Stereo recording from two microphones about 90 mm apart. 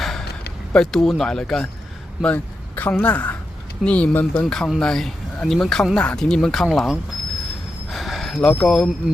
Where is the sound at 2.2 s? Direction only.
20° left (ahead or behind).